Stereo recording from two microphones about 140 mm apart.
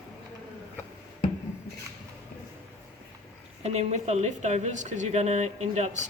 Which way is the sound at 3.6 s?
50° right (ahead or behind).